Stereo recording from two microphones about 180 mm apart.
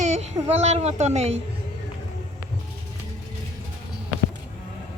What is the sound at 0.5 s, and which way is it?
Speech, 35° right (ahead or behind).